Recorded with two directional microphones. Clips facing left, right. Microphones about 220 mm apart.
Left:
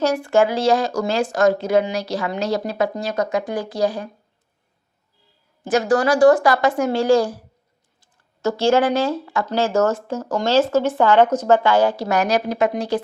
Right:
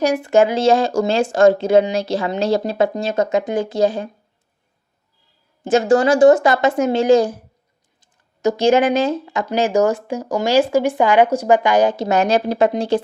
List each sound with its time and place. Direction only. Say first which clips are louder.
0.0 s speech: right 2 dB; 15° right (ahead or behind)
5.6 s speech: right 3 dB; 25° right (ahead or behind)